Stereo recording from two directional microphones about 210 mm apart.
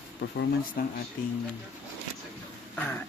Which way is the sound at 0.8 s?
45° left (ahead or behind).